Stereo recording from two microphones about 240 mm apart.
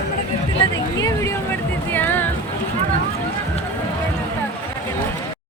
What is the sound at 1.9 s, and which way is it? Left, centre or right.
Music, centre.